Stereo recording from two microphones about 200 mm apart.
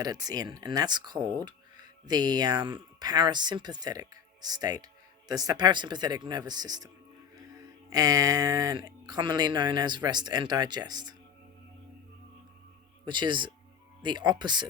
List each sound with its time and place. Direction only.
0.0 s speech: 20° right (ahead or behind)
13.1 s speech: 25° right (ahead or behind)